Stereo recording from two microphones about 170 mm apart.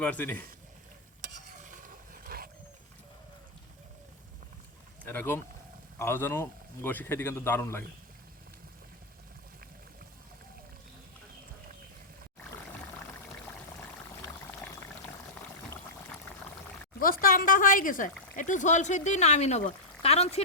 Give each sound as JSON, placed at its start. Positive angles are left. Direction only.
{"t": 0.0, "sound": "a man's voice", "side_deg": 10}
{"t": 1.7, "sound": "a sound", "side_deg": -55}
{"t": 5.0, "sound": "a man's voice", "side_deg": 15}
{"t": 13.2, "sound": "pour", "side_deg": 0}
{"t": 17.0, "sound": "a sound", "side_deg": 55}
{"t": 18.3, "sound": "speech", "side_deg": 50}